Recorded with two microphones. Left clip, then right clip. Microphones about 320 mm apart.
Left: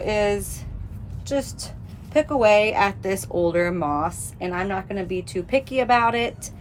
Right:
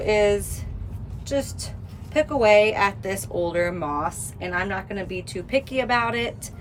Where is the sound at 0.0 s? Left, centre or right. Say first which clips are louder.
Right 2 dB; centre.